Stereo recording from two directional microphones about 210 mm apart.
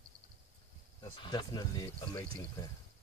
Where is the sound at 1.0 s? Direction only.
20° left (ahead or behind).